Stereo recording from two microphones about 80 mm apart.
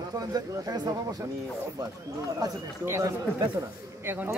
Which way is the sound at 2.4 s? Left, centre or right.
Right.